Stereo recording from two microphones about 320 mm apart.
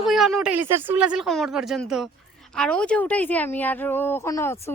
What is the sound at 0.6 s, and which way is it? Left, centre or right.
A woman's voice, centre.